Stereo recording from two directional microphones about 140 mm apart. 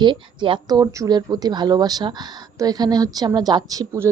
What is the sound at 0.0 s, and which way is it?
A woman's voice, 35° right (ahead or behind).